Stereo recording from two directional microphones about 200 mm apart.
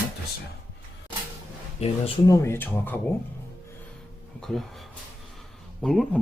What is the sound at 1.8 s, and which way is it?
Speech, 25° left (ahead or behind).